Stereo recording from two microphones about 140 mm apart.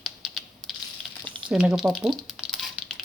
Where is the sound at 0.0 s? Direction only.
Centre (ahead or behind).